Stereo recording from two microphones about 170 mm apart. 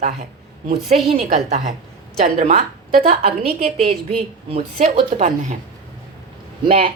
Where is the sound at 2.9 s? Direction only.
55° right (ahead or behind).